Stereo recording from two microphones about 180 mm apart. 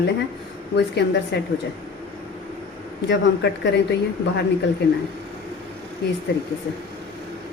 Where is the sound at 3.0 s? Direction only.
75° left (ahead or behind).